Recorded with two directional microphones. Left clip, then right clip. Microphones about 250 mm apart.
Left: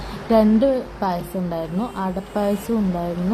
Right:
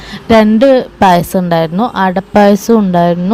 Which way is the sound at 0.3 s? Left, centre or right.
Right.